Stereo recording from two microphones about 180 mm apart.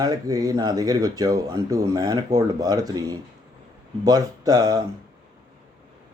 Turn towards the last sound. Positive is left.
turn(degrees=-20)  # may be behind; listen again after turning